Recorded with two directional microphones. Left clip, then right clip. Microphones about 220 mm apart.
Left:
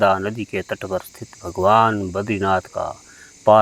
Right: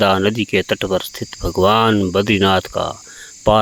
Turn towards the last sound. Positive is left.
turn(degrees=-45)  # may be behind; listen again after turning